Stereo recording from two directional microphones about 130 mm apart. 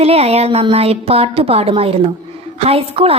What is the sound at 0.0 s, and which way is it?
A woman's voice, 50° right (ahead or behind).